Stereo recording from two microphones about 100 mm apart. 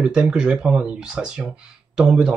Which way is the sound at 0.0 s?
10° right (ahead or behind).